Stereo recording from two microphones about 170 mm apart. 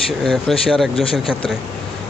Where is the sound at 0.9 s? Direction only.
35° left (ahead or behind).